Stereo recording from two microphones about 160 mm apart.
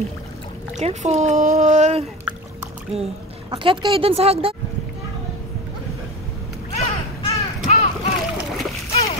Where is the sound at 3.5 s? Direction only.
35° right (ahead or behind).